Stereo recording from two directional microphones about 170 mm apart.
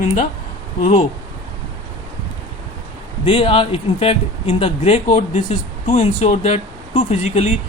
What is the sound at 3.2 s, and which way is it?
Speech, 35° left (ahead or behind).